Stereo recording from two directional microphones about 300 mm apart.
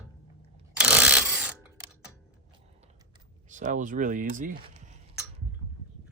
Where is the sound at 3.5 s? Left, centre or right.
Right.